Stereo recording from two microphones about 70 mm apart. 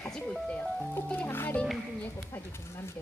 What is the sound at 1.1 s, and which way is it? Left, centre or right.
Speech, left.